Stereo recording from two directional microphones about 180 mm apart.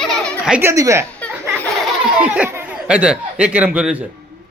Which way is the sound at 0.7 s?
15° right (ahead or behind).